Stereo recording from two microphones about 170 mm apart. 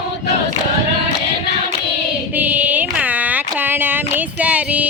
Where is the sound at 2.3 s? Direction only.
10° right (ahead or behind).